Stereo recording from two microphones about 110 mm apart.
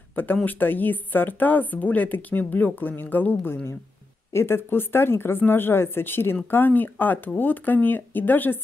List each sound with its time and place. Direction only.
0.1 s speech: 15° left (ahead or behind)